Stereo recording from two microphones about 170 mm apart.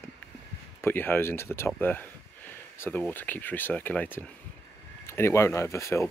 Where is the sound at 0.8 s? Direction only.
10° left (ahead or behind).